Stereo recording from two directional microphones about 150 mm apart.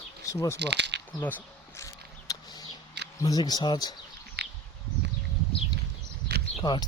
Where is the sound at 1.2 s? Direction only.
15° left (ahead or behind).